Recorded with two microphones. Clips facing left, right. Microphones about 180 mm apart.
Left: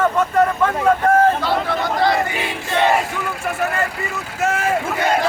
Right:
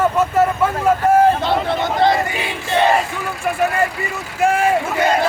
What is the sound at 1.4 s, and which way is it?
Speech, 20° right (ahead or behind).